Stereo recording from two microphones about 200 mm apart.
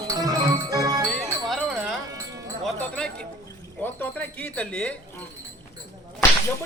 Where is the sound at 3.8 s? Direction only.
10° left (ahead or behind).